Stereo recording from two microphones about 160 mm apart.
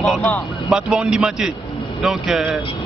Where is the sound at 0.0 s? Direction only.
5° left (ahead or behind).